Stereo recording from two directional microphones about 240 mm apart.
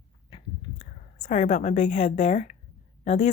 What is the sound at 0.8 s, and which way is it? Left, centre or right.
A woman's voice, left.